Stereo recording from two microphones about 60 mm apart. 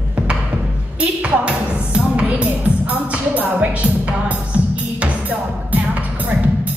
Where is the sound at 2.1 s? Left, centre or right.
Right.